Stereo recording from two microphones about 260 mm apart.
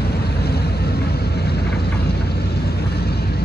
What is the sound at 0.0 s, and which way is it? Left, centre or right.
Vehicle, left.